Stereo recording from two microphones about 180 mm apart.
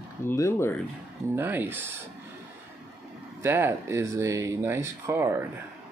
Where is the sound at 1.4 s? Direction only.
10° right (ahead or behind).